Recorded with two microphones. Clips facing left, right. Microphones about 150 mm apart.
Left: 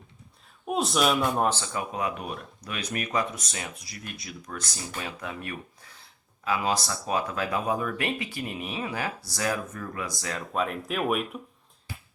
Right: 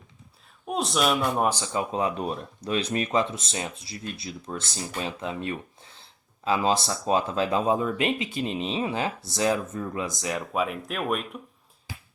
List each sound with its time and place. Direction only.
0.7 s speech: centre (ahead or behind)
1.5 s speech: 15° right (ahead or behind)
10.5 s speech: 5° right (ahead or behind)